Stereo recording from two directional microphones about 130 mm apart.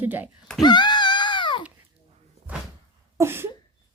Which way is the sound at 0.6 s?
35° left (ahead or behind).